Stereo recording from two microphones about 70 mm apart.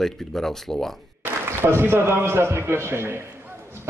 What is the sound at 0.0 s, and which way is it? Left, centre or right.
Speech, centre.